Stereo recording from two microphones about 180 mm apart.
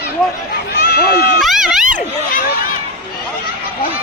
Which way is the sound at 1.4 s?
Centre (ahead or behind).